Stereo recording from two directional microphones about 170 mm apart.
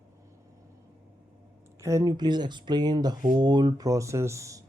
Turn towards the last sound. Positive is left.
turn(degrees=-20)  # may be behind; listen again after turning